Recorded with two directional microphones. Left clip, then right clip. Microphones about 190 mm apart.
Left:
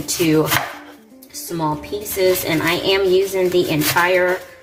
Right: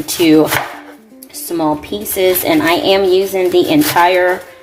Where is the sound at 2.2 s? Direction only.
45° right (ahead or behind).